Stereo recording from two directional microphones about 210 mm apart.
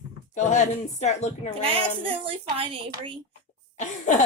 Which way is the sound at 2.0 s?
25° right (ahead or behind).